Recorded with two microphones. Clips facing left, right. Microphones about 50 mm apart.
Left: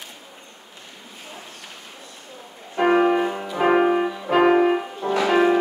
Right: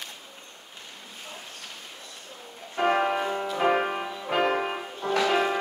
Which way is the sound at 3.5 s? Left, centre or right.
Centre.